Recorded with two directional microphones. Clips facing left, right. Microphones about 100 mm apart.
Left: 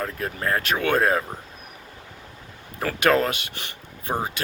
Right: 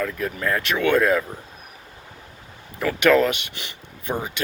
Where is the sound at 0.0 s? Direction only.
35° left (ahead or behind).